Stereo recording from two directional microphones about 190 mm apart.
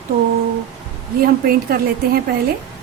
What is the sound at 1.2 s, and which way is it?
Speech, 50° right (ahead or behind).